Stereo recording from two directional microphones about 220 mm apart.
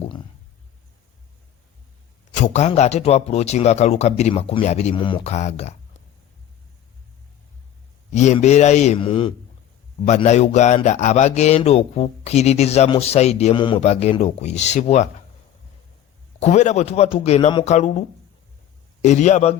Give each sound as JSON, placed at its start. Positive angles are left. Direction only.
{"t": 2.3, "sound": "a man's voice", "side_deg": 30}
{"t": 8.1, "sound": "a man's voice", "side_deg": 30}
{"t": 16.4, "sound": "a man's voice", "side_deg": 30}
{"t": 19.0, "sound": "a man's voice", "side_deg": 30}